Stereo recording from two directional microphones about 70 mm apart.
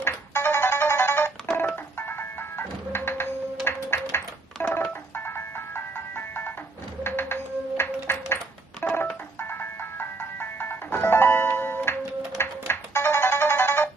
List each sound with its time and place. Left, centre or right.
0.0 s music: left
4.6 s telephone dialing: left
5.1 s music: left